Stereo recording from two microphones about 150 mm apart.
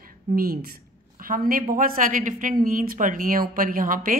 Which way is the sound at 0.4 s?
80° right.